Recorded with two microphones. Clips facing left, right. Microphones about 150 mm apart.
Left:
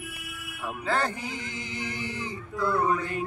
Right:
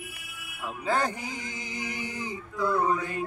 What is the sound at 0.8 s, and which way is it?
Mantra, 15° right (ahead or behind).